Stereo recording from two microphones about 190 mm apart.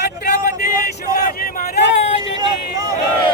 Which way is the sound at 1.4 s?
50° left (ahead or behind).